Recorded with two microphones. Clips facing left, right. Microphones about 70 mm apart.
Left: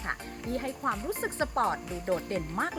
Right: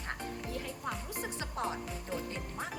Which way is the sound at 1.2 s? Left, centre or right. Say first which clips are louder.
Left 8 dB; left.